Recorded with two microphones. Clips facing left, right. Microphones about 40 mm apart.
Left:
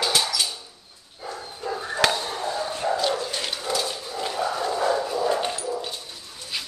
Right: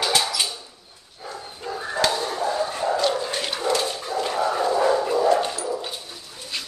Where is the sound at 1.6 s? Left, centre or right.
Right.